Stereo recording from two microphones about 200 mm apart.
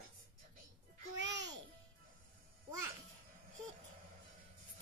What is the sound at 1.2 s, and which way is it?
Music, 60° right (ahead or behind).